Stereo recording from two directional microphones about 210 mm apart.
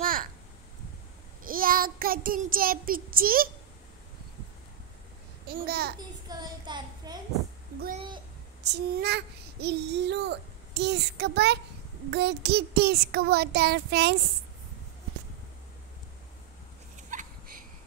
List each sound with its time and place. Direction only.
0.0 s a sound: 40° right (ahead or behind)
1.4 s child singing: 40° right (ahead or behind)
5.5 s a child's voice: 50° right (ahead or behind)
5.9 s a child's voice: 20° right (ahead or behind)
8.6 s a child's voice: 50° right (ahead or behind)
17.1 s a sound: 40° right (ahead or behind)